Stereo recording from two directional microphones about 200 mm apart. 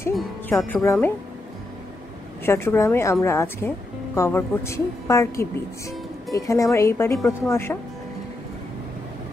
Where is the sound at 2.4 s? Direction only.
10° left (ahead or behind).